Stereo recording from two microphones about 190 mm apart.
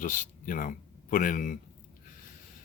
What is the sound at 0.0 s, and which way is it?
Speech, 45° left (ahead or behind).